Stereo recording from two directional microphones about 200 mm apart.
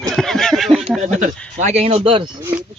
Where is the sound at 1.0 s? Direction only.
40° right (ahead or behind).